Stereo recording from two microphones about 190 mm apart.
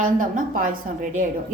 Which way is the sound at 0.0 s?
45° right (ahead or behind).